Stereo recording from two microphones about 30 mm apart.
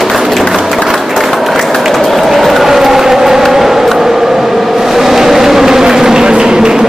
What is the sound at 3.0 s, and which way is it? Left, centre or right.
Vehicle, centre.